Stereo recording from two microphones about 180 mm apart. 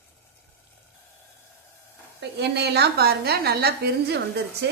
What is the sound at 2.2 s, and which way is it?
A woman's voice, 65° right (ahead or behind).